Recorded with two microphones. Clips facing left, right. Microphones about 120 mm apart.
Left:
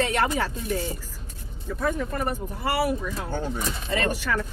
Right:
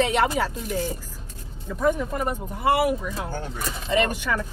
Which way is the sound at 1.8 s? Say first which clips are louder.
Right 3 dB; 20° right (ahead or behind).